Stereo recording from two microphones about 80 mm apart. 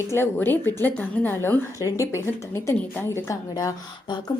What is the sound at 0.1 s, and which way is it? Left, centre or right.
A woman's voice, left.